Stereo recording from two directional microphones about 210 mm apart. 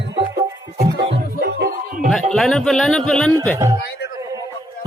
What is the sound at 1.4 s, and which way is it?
Music, 50° right (ahead or behind).